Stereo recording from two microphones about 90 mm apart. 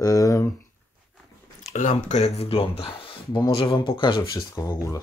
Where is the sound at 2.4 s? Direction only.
90° left.